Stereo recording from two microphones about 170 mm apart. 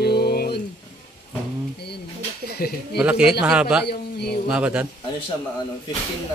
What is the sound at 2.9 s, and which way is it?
Speech, 5° right (ahead or behind).